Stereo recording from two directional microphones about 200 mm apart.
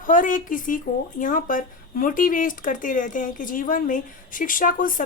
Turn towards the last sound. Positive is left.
turn(degrees=40)  # may be behind; listen again after turning